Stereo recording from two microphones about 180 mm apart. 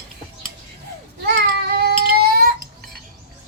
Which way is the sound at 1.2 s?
60° right (ahead or behind).